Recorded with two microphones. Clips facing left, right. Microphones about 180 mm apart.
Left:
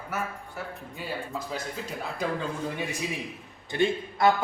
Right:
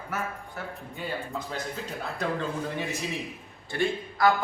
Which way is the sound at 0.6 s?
5° left (ahead or behind).